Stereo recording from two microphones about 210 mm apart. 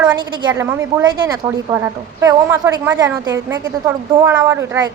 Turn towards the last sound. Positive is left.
turn(degrees=-10)  # may be behind; listen again after turning